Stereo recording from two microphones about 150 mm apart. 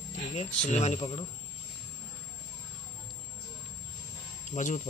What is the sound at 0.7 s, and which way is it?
Speech, 50° left (ahead or behind).